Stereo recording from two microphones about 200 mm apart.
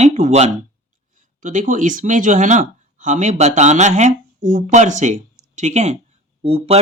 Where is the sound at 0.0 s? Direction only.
35° right (ahead or behind).